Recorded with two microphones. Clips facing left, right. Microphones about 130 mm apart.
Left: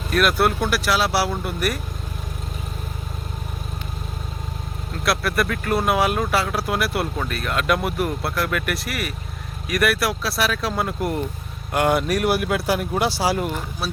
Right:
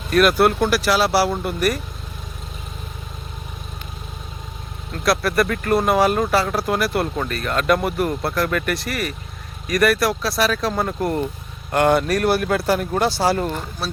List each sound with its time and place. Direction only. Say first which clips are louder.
0.1 s speech: right 4 dB; centre (ahead or behind)
5.0 s speech: right 3 dB; centre (ahead or behind)